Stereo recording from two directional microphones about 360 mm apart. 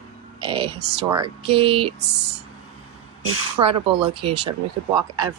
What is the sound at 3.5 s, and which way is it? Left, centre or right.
Speech, centre.